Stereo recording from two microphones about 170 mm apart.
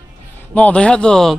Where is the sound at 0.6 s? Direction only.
5° left (ahead or behind).